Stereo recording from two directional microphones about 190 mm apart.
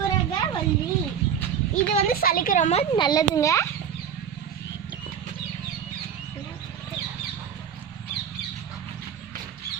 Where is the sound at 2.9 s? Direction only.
25° left (ahead or behind).